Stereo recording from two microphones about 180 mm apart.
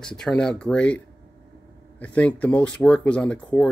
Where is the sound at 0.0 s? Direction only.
5° left (ahead or behind).